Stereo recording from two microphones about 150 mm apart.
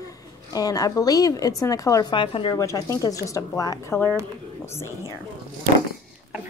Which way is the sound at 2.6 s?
20° left (ahead or behind).